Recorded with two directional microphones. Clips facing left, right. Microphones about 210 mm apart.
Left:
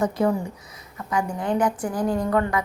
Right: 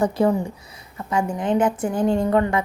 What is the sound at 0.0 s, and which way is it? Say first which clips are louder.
A woman's voice: right 3 dB; 30° right (ahead or behind).